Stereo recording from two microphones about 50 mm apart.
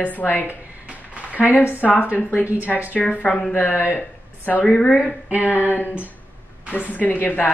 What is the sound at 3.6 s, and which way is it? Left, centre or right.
Speech, left.